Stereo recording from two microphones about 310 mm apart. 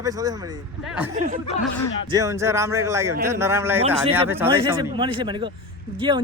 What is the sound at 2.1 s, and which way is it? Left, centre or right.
A man's voice, centre.